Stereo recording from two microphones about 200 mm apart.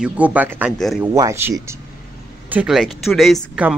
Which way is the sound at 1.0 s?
15° right (ahead or behind).